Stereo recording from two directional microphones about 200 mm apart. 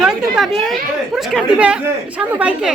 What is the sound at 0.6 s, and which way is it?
Speech, centre (ahead or behind).